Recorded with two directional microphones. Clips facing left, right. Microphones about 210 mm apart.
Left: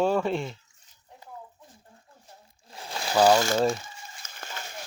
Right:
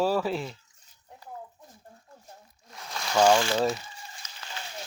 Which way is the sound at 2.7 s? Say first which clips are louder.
Left 1 dB; 30° left (ahead or behind).